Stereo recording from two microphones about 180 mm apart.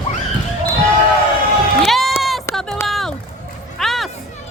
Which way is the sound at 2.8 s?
Centre (ahead or behind).